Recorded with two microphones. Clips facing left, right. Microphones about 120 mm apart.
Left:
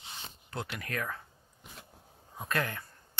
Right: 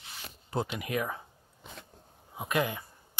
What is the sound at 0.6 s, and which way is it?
Speech, 20° right (ahead or behind).